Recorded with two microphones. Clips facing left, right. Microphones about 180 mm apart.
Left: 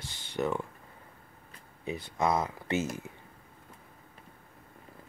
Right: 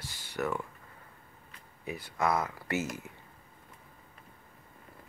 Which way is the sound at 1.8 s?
20° left (ahead or behind).